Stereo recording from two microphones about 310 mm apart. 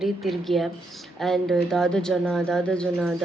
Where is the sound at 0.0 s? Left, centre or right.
Centre.